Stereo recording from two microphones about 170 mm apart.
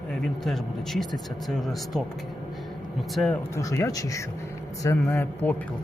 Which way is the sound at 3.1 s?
5° left (ahead or behind).